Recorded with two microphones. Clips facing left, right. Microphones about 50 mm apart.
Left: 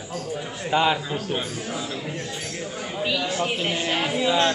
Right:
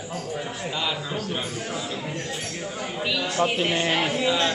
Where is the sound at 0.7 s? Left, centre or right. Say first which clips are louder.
Left 10 dB; left.